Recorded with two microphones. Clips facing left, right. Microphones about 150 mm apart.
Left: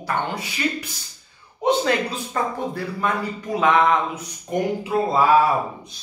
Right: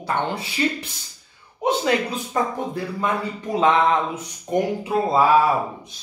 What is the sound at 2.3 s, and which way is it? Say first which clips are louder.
Speech: right 1 dB; 20° right (ahead or behind).